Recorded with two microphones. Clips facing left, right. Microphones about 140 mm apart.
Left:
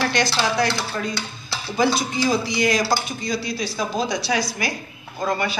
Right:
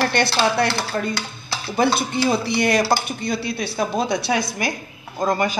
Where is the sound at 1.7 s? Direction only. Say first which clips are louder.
Right 1 dB; 60° right (ahead or behind).